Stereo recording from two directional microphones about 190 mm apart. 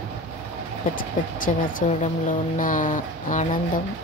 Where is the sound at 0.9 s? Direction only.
45° left (ahead or behind).